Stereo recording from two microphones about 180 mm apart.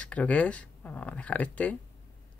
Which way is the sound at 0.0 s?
5° left (ahead or behind).